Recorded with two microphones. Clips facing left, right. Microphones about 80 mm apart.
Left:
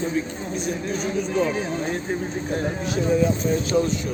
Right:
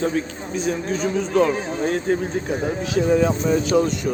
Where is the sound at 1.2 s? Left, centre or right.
Right.